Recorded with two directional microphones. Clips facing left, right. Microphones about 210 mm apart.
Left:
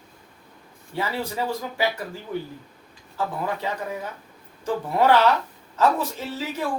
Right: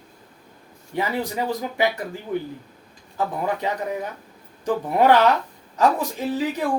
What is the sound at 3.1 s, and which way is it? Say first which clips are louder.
Speech: right 3 dB; 15° right (ahead or behind).